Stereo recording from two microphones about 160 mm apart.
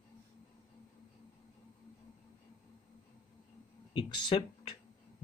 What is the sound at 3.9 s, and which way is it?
Speech, 30° left (ahead or behind).